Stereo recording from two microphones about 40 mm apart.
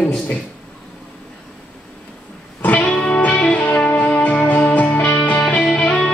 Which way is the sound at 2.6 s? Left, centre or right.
Left.